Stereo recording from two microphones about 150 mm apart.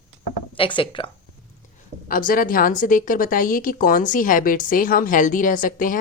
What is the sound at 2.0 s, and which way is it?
A woman's voice, 70° left (ahead or behind).